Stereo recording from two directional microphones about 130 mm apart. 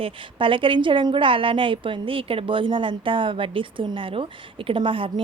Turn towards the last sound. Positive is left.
turn(degrees=-40)  # may be behind; listen again after turning